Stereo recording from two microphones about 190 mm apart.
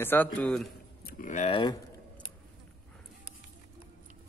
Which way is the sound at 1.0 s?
45° left (ahead or behind).